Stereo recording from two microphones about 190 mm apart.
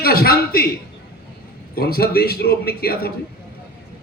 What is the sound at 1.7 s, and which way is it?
A man's voice, 55° left (ahead or behind).